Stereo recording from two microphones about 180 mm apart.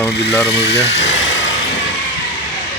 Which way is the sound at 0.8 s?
75° left (ahead or behind).